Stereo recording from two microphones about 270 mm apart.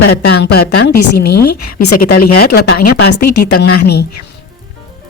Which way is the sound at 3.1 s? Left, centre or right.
Left.